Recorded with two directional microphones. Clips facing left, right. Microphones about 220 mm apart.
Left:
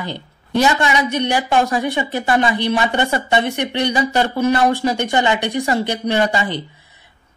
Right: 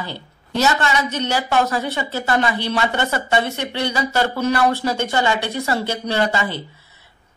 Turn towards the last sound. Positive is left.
turn(degrees=15)  # may be behind; listen again after turning